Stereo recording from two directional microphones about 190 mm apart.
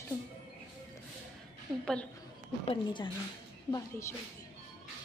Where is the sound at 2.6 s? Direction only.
25° left (ahead or behind).